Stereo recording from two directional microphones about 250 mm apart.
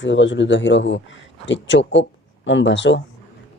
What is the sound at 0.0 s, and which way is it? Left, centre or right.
Speech, left.